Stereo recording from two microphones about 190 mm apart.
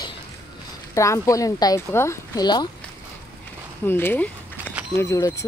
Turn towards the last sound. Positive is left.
turn(degrees=15)  # may be behind; listen again after turning